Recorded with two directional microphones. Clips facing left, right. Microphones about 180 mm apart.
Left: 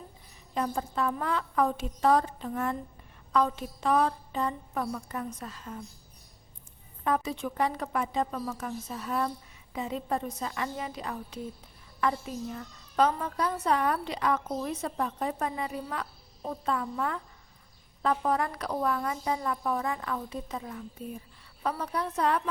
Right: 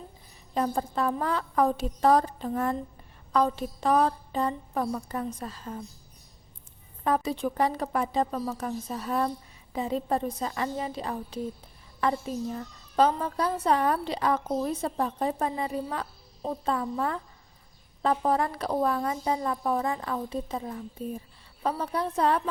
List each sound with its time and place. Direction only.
0.5 s a child's voice: 35° right (ahead or behind)
7.0 s a child's voice: 35° right (ahead or behind)